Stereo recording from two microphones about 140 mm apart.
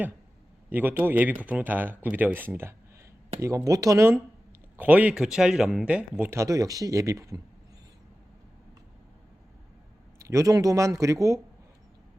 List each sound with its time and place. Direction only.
0.7 s speech: 15° right (ahead or behind)
10.2 s speech: 20° right (ahead or behind)